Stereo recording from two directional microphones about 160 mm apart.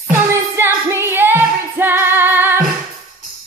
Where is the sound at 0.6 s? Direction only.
15° right (ahead or behind).